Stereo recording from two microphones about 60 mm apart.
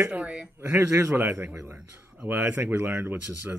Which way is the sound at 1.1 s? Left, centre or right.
Right.